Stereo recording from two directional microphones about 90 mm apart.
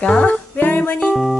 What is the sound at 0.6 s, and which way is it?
Music, 20° left (ahead or behind).